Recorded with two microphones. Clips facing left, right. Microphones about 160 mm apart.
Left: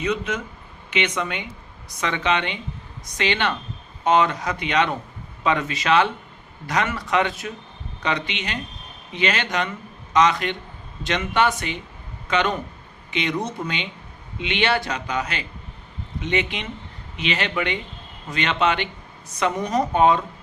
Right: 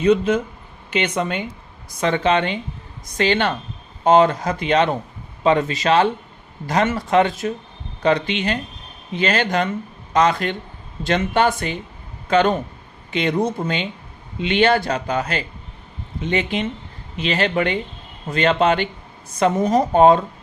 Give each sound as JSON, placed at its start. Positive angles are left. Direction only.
{"t": 0.0, "sound": "a man's voice", "side_deg": -30}